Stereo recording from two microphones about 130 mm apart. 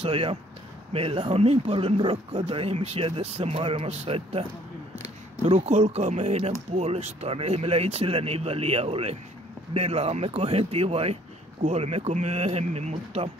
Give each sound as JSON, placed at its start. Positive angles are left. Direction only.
{"t": 0.0, "sound": "speech", "side_deg": -45}